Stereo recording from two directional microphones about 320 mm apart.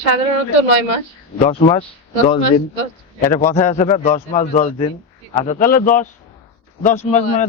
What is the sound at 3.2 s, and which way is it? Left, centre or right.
A man's voice, centre.